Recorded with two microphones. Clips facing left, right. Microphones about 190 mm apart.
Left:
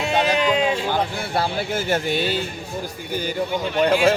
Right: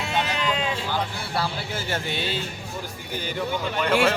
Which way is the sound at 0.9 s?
50° left (ahead or behind).